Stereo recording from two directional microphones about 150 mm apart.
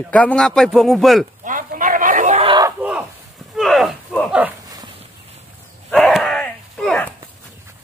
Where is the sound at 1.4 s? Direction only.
60° right (ahead or behind).